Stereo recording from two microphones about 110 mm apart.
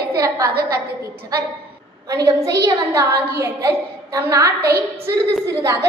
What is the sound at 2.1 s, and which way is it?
A woman's voice, 30° right (ahead or behind).